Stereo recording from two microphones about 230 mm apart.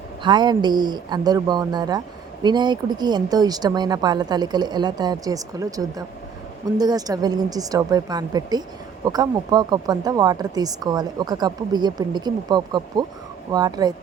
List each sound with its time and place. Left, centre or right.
0.2 s speech: centre